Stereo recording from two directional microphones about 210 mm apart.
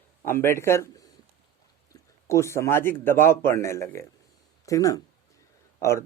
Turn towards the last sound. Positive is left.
turn(degrees=15)  # may be behind; listen again after turning